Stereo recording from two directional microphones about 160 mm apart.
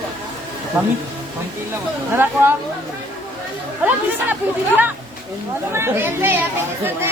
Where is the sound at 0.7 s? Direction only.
10° right (ahead or behind).